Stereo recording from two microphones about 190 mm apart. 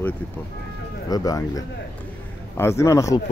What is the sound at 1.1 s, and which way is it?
A man's voice, 20° left (ahead or behind).